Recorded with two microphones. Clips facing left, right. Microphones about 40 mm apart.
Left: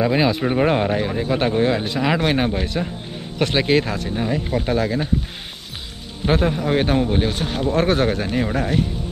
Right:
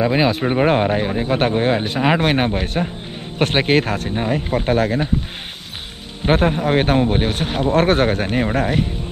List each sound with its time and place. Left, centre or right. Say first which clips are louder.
0.0 s speech: right 1 dB; centre; by 5.0 s right
6.2 s speech: right 3 dB; right